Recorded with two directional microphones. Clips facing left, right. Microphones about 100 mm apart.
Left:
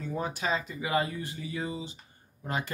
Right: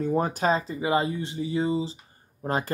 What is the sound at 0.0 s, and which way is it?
Speech, 45° right (ahead or behind).